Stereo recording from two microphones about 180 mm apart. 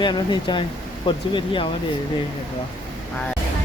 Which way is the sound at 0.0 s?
25° left (ahead or behind).